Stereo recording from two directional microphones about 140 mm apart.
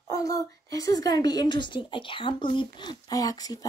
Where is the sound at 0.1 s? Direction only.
25° left (ahead or behind).